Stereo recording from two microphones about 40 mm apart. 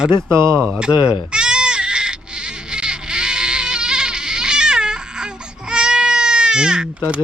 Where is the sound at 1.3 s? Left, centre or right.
Right.